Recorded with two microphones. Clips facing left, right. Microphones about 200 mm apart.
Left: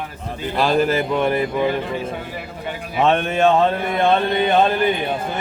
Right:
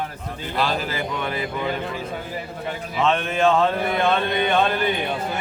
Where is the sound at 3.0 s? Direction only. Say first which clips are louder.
Left 4 dB; 55° left (ahead or behind).